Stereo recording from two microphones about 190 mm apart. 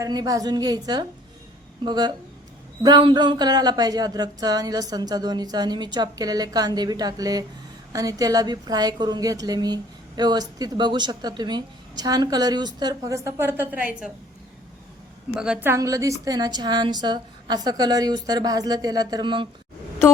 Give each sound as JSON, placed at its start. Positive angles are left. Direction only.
{"t": 0.0, "sound": "a woman's voice", "side_deg": -20}
{"t": 15.4, "sound": "a woman's voice", "side_deg": -10}